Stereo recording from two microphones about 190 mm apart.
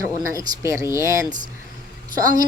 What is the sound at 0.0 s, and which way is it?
A woman's voice, 15° right (ahead or behind).